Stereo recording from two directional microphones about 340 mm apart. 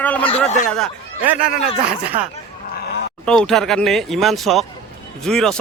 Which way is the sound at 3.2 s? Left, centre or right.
Centre.